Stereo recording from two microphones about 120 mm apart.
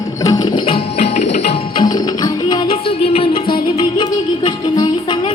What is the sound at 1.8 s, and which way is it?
Music, 35° left (ahead or behind).